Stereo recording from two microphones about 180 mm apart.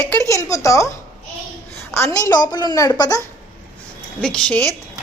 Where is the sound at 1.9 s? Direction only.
15° left (ahead or behind).